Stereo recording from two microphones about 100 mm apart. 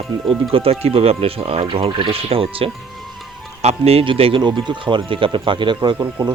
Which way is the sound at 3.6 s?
90° right.